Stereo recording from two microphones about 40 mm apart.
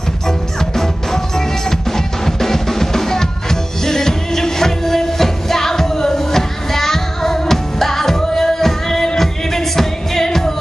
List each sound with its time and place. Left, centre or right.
0.6 s music: centre